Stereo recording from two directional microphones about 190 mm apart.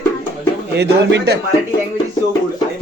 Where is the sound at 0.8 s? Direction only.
65° right (ahead or behind).